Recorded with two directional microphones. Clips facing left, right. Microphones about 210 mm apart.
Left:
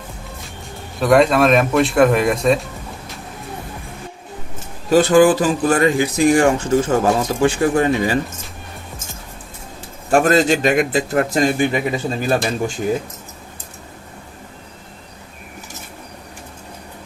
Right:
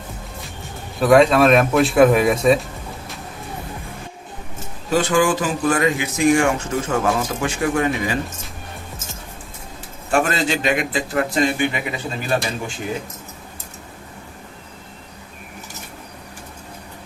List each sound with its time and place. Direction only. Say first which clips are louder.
0.9 s speech: even; centre (ahead or behind)
4.9 s speech: left 6 dB; 35° left (ahead or behind)
10.1 s speech: left 6 dB; 45° left (ahead or behind)